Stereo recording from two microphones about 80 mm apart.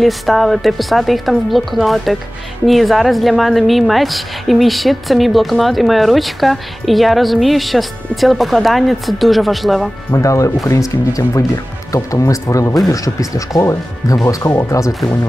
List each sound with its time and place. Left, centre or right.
0.0 s a woman's voice: centre
10.1 s speech: left